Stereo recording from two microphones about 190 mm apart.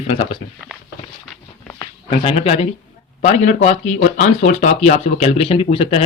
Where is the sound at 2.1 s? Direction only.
30° left (ahead or behind).